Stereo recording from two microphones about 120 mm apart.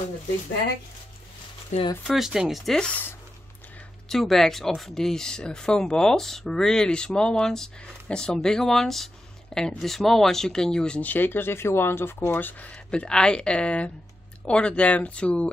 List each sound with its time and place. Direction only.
1.7 s speech: 70° left (ahead or behind)
2.0 s speech: 5° right (ahead or behind)
4.1 s speech: 5° left (ahead or behind)